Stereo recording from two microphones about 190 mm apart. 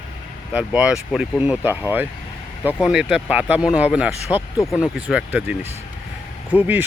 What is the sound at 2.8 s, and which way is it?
Speech, 5° right (ahead or behind).